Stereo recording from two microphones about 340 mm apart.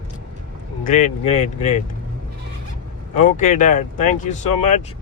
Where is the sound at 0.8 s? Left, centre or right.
Left.